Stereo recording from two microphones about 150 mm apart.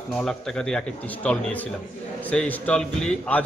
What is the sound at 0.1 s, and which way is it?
A man's voice, 5° left (ahead or behind).